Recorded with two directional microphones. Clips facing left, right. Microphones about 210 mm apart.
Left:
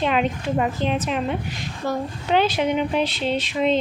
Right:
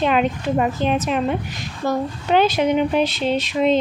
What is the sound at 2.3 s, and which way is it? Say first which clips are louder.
Speech: right 3 dB; 45° right (ahead or behind).